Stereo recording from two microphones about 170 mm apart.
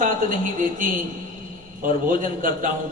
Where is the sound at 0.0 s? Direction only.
55° right (ahead or behind).